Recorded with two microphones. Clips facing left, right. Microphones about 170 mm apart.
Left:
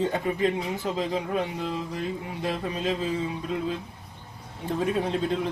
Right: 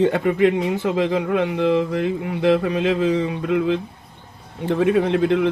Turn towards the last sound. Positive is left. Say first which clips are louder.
# right 9 dB
turn(degrees=-75)  # may be behind; listen again after turning